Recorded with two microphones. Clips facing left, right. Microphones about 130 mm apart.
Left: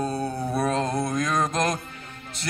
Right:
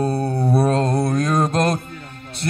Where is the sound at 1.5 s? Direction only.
60° right (ahead or behind).